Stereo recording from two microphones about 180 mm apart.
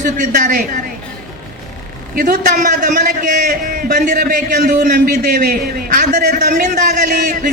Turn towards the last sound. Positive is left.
turn(degrees=-45)  # may be behind; listen again after turning